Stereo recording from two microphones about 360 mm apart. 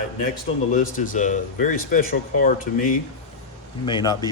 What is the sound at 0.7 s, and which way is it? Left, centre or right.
Speech, left.